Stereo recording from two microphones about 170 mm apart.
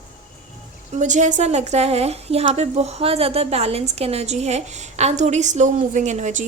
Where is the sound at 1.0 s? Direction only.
45° right (ahead or behind).